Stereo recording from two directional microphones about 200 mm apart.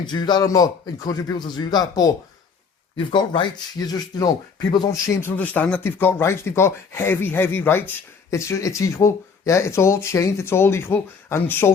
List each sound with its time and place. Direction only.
0.0 s a man's voice: 20° left (ahead or behind)